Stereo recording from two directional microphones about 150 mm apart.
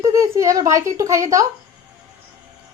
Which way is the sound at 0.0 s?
20° right (ahead or behind).